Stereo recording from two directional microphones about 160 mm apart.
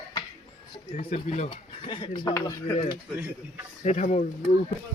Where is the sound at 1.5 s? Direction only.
30° left (ahead or behind).